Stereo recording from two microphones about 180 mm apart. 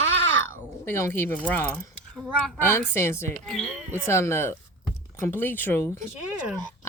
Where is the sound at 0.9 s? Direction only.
15° left (ahead or behind).